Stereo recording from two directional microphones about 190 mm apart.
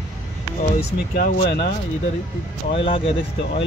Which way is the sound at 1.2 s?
60° left (ahead or behind).